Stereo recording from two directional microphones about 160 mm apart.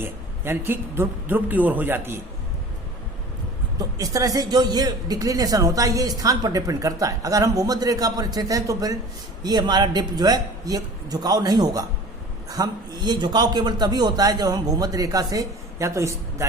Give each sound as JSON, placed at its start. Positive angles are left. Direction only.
{"t": 0.0, "sound": "a man's voice", "side_deg": -15}
{"t": 3.8, "sound": "speech", "side_deg": -20}